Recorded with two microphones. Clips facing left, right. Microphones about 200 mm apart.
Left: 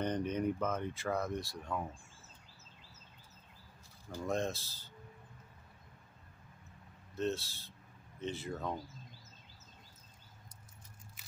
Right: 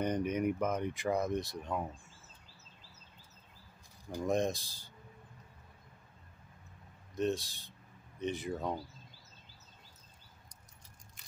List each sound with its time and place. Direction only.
0.0 s speech: 10° right (ahead or behind)
4.1 s speech: 15° right (ahead or behind)
7.2 s speech: 15° right (ahead or behind)